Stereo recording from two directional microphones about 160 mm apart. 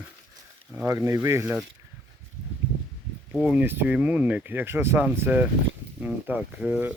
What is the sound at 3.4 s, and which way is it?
Speech, 10° right (ahead or behind).